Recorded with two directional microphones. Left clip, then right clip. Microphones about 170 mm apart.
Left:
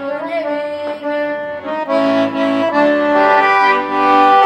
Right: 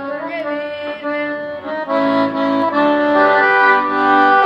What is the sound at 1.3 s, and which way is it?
Accordion, 25° left (ahead or behind).